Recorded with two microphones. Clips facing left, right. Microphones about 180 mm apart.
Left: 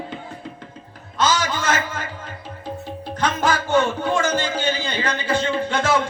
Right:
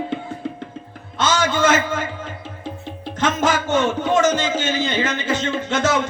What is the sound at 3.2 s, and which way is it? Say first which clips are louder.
A man's voice: right 2 dB; 20° right (ahead or behind).